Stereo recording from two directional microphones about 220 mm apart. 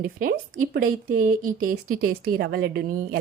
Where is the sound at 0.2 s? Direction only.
40° right (ahead or behind).